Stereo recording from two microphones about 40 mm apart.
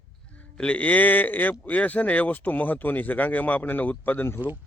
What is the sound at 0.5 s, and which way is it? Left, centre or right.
Speech, left.